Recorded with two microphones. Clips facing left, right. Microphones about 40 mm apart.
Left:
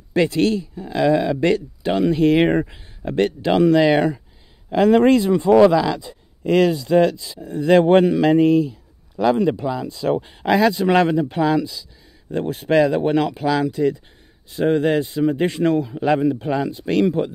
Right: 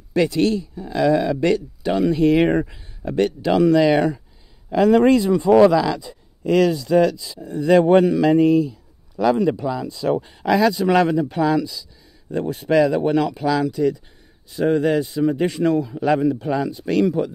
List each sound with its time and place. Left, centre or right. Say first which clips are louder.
0.2 s speech: even; left
0.7 s speech: even; centre
2.6 s speech: left 1 dB; centre
3.1 s speech: even; left
5.6 s speech: even; centre
6.0 s speech: even; left
9.1 s speech: even; centre
9.9 s speech: even; left
16.0 s speech: even; left